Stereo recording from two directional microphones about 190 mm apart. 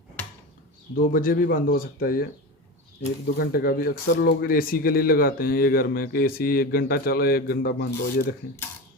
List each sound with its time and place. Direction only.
0.9 s speech: 50° left (ahead or behind)
3.3 s speech: 50° left (ahead or behind)